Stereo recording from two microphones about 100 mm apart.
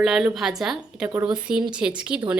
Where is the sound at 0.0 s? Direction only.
5° right (ahead or behind).